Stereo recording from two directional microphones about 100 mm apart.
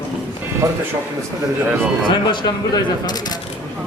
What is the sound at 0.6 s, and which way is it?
Speech, 35° right (ahead or behind).